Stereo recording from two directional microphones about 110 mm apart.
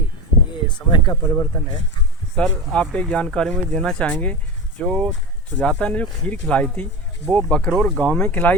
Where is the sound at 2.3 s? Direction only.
5° left (ahead or behind).